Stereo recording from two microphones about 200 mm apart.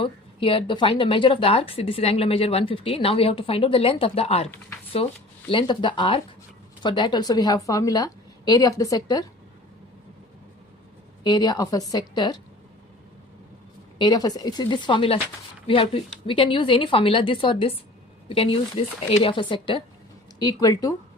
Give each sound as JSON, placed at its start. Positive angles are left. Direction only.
{"t": 0.0, "sound": "a woman's voice", "side_deg": 25}
{"t": 11.2, "sound": "a woman's voice", "side_deg": 20}
{"t": 14.0, "sound": "a woman's voice", "side_deg": 20}